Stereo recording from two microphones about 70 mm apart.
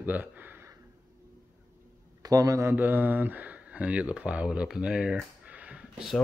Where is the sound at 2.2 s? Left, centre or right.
Right.